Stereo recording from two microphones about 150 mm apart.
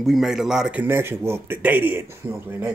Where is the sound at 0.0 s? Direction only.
Centre (ahead or behind).